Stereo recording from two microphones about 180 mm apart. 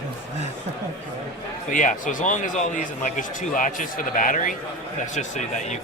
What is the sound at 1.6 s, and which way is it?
A man's voice, 45° left (ahead or behind).